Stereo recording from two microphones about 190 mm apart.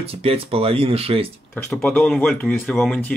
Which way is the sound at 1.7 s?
5° left (ahead or behind).